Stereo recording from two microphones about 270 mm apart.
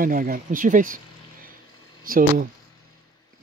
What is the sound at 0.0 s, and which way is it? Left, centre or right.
Speech, right.